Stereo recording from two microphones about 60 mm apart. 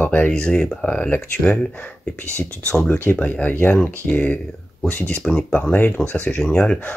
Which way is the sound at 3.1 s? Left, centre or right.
Centre.